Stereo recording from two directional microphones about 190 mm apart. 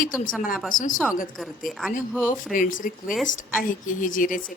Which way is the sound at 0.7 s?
40° left (ahead or behind).